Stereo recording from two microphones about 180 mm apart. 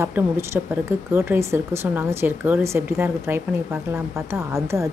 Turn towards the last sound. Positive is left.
turn(degrees=-15)  # may be behind; listen again after turning